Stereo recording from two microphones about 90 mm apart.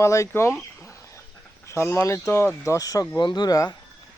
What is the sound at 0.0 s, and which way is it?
Speech, 35° left (ahead or behind).